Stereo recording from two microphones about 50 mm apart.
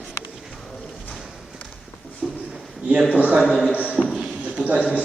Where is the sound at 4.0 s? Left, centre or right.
Centre.